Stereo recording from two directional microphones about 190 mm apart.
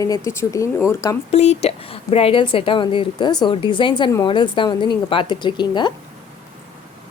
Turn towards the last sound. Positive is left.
turn(degrees=25)  # may be behind; listen again after turning